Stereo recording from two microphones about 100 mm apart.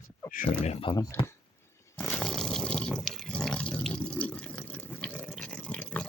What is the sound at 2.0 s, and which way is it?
Water, 10° left (ahead or behind).